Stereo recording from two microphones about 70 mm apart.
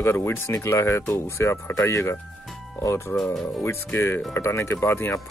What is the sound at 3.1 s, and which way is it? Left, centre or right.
Speech, centre.